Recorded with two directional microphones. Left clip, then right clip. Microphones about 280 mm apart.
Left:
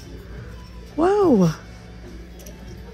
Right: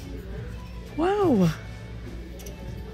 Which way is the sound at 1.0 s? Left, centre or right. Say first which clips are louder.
Left 5 dB; centre.